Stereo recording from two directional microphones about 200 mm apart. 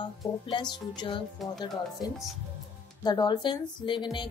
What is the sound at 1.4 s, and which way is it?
Speech, centre (ahead or behind).